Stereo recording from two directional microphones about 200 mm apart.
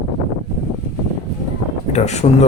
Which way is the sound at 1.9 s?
35° left (ahead or behind).